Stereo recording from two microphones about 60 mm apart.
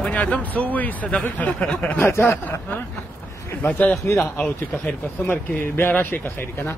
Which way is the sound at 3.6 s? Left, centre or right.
Left.